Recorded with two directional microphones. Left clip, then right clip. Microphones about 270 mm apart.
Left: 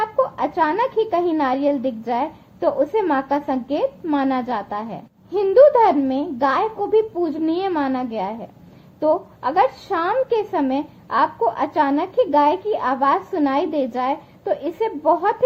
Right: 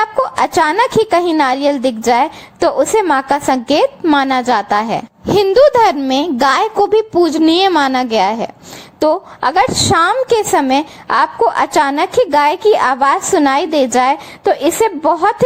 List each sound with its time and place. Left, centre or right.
0.0 s a woman's voice: right